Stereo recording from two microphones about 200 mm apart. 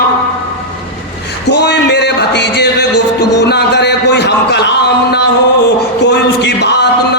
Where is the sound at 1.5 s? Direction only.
60° left (ahead or behind).